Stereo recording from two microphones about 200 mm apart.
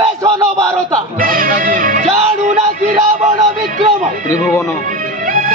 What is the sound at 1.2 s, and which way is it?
Music, 45° right (ahead or behind).